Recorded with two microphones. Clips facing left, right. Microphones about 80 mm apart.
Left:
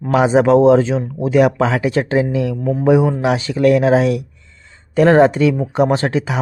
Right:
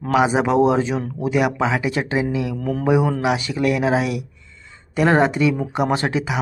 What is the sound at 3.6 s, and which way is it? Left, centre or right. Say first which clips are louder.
Speech: left 8 dB; left.